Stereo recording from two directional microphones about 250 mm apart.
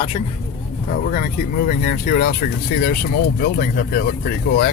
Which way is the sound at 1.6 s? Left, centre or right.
Left.